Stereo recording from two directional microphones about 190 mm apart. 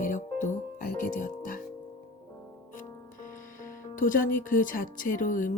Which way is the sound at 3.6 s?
45° left (ahead or behind).